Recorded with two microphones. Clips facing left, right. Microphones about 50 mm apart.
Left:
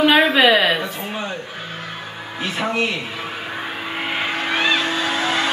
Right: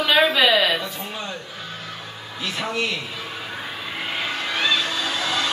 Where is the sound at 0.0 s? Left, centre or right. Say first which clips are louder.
Left 4 dB; left.